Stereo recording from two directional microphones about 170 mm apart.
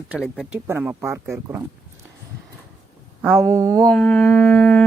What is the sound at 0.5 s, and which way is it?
Speech, 10° right (ahead or behind).